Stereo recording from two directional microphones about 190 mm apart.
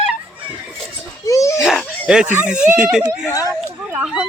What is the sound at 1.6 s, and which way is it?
Speech, 5° right (ahead or behind).